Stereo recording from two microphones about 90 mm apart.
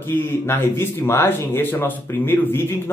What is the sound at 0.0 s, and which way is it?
Speech, 25° left (ahead or behind).